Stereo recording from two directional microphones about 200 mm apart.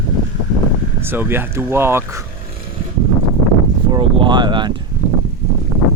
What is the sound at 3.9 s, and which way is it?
Speech, 25° right (ahead or behind).